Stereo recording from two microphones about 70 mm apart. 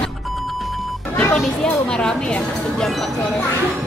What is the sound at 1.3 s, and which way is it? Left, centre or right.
Speech, centre.